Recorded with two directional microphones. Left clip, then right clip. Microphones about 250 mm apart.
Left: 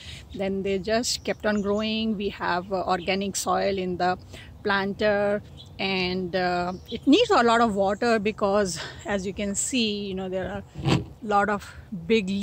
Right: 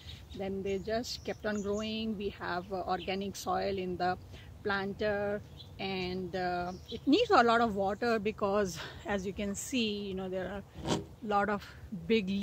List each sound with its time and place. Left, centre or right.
0.4 s speech: centre